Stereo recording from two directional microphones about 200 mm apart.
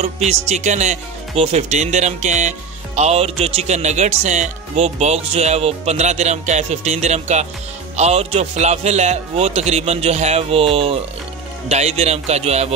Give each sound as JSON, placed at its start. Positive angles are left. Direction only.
{"t": 0.0, "sound": "speech", "side_deg": -35}